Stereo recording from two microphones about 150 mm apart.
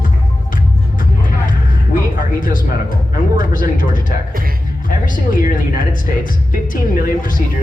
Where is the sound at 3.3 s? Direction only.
65° left (ahead or behind).